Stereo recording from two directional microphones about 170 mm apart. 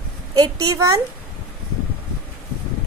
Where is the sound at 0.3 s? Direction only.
20° right (ahead or behind).